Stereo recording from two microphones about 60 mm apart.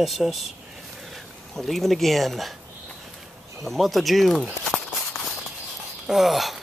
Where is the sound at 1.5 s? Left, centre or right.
Centre.